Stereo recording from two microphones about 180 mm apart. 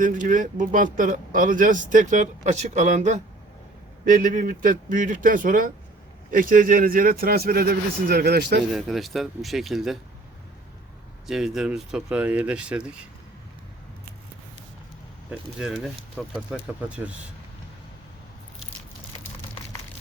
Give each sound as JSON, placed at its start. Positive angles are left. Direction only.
{"t": 0.0, "sound": "speech", "side_deg": -45}
{"t": 8.7, "sound": "speech", "side_deg": 0}
{"t": 11.3, "sound": "speech", "side_deg": -5}
{"t": 15.3, "sound": "speech", "side_deg": 0}